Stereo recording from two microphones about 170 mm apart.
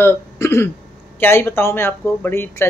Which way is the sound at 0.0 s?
15° left (ahead or behind).